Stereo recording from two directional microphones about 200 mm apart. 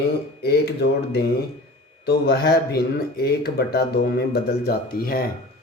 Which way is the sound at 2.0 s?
50° left (ahead or behind).